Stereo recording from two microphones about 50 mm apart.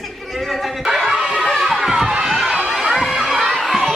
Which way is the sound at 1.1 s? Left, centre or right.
Centre.